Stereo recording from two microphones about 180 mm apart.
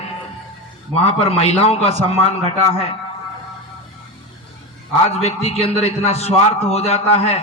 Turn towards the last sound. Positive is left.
turn(degrees=35)  # may be behind; listen again after turning